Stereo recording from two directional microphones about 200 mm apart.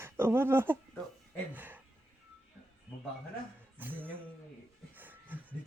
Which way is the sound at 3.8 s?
10° right (ahead or behind).